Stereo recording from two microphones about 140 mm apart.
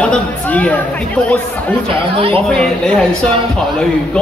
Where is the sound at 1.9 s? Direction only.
40° right (ahead or behind).